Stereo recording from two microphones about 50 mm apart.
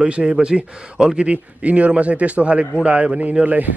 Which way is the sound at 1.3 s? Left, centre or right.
Right.